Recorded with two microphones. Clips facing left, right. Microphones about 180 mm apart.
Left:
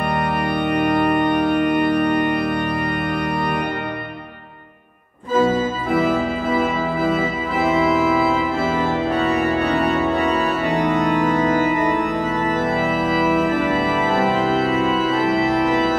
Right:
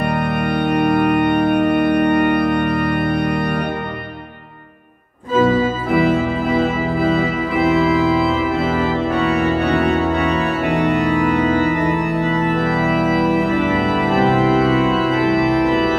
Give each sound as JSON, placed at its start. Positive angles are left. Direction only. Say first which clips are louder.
{"t": 0.4, "sound": "organ", "louder": "right 3 dB", "side_deg": -65}
{"t": 5.4, "sound": "organ", "louder": "right 3 dB", "side_deg": -60}
{"t": 14.3, "sound": "organ", "louder": "right 4 dB", "side_deg": -65}